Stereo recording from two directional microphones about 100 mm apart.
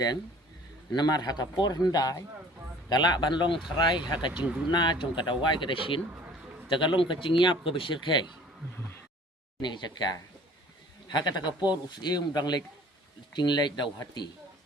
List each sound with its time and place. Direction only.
0.9 s speech: 40° left (ahead or behind)
4.4 s speech: 10° right (ahead or behind)
4.7 s speech: 50° left (ahead or behind)
9.6 s speech: 50° left (ahead or behind)